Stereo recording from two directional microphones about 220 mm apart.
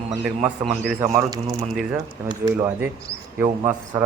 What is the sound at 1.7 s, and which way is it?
Speech, centre (ahead or behind).